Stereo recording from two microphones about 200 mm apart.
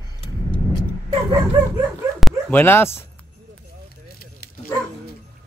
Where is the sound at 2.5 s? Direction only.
10° left (ahead or behind).